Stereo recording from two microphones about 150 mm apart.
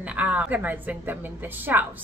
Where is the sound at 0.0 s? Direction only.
10° right (ahead or behind).